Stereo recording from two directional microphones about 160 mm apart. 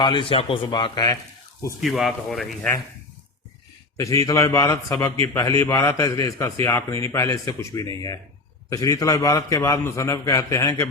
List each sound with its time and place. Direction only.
0.0 s a man's voice: 30° left (ahead or behind)
1.8 s speech: centre (ahead or behind)
3.9 s a man's voice: 20° left (ahead or behind)